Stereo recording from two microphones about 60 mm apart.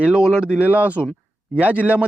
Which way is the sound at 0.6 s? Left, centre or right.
Right.